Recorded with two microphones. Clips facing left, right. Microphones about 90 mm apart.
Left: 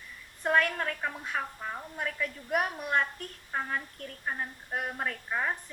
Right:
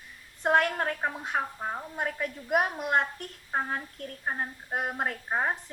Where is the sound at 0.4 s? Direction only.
35° right (ahead or behind).